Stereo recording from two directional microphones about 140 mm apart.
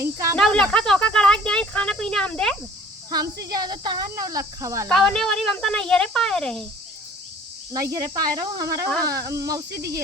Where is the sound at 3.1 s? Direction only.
25° right (ahead or behind).